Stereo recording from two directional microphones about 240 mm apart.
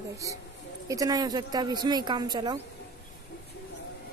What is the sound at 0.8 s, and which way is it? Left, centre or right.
Speech, centre.